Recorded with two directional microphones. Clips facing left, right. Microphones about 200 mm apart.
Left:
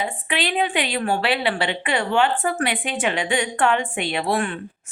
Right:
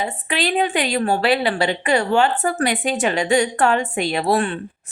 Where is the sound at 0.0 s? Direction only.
40° right (ahead or behind).